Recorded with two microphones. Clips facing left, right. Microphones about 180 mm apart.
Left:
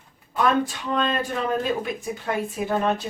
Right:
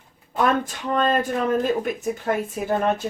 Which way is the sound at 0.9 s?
45° right (ahead or behind).